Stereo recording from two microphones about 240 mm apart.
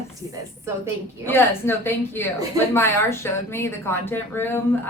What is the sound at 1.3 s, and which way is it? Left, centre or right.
Speech, centre.